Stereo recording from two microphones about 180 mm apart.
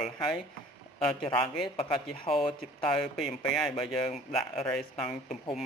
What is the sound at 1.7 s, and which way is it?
Speech, 30° left (ahead or behind).